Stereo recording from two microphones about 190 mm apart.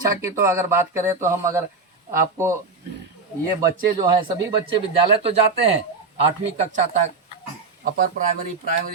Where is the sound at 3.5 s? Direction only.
20° right (ahead or behind).